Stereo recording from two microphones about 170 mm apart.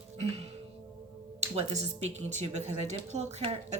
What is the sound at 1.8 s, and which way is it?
Speech, 40° right (ahead or behind).